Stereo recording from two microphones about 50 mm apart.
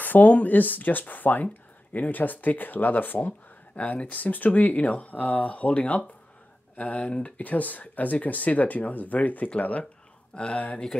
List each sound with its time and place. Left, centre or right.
0.0 s speech: left; by 10.6 s centre